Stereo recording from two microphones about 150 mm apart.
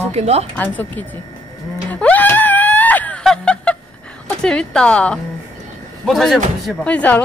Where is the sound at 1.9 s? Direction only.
10° left (ahead or behind).